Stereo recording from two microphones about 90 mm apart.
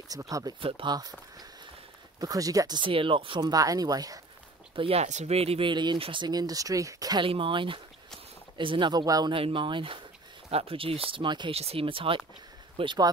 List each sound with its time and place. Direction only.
0.1 s speech: 40° right (ahead or behind)
0.6 s speech: 75° right (ahead or behind)
2.1 s speech: 45° right (ahead or behind)
2.8 s speech: 75° right (ahead or behind)
3.3 s speech: 45° right (ahead or behind)
4.7 s speech: 85° right
6.2 s speech: 45° right (ahead or behind)
7.2 s speech: 70° right (ahead or behind)
8.9 s speech: 45° right (ahead or behind)
9.3 s speech: 75° right (ahead or behind)
10.6 s speech: 90° right
12.7 s speech: 65° right (ahead or behind)